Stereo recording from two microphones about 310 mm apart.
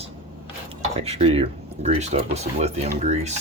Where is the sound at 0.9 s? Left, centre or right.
Centre.